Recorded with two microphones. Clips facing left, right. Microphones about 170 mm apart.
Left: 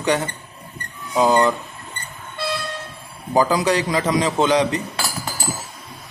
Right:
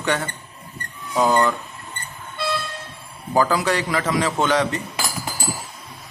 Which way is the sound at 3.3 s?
15° left (ahead or behind).